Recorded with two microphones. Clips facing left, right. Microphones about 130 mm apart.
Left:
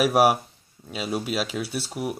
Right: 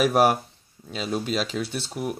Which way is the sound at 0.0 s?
5° left (ahead or behind).